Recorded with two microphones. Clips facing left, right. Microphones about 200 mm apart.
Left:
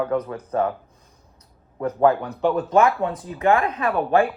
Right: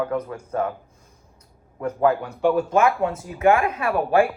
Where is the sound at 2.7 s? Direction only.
35° left (ahead or behind).